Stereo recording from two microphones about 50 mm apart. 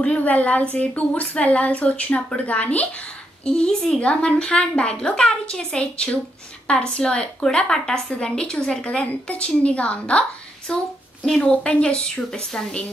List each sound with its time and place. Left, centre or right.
0.0 s a woman's voice: left
3.4 s a woman's voice: centre